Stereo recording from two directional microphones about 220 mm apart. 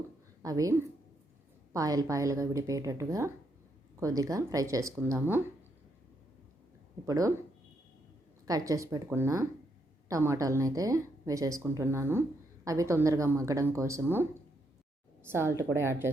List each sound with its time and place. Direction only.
0.4 s a woman's voice: 15° right (ahead or behind)
7.0 s a woman's voice: 15° right (ahead or behind)
8.4 s a woman's voice: 15° right (ahead or behind)